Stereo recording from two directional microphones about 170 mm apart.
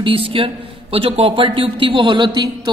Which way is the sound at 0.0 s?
30° right (ahead or behind).